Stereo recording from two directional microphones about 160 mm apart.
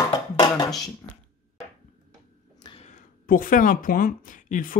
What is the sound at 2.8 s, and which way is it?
Speech, 50° left (ahead or behind).